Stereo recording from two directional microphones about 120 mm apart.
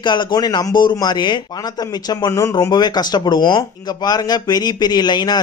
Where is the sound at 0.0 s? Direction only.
40° left (ahead or behind).